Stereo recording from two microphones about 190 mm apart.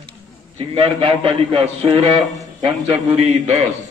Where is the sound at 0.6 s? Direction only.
30° right (ahead or behind).